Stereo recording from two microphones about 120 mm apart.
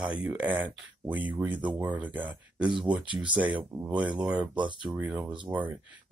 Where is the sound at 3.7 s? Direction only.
15° right (ahead or behind).